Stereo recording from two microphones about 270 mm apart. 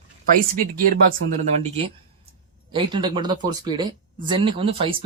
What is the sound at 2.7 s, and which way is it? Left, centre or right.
Speech, centre.